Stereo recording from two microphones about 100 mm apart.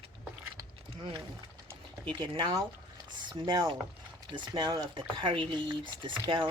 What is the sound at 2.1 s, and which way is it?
Speech, 50° right (ahead or behind).